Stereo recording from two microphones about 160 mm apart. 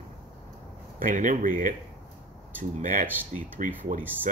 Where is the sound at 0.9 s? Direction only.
55° right (ahead or behind).